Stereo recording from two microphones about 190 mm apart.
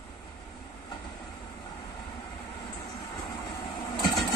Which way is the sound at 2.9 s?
20° left (ahead or behind).